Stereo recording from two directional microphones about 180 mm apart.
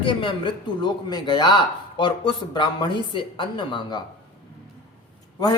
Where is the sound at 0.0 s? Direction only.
25° left (ahead or behind).